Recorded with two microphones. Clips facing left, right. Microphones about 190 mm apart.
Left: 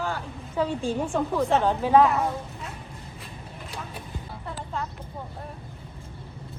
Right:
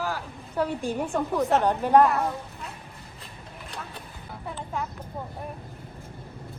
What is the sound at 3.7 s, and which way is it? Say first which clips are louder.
Vehicle: left 1 dB; 10° left (ahead or behind).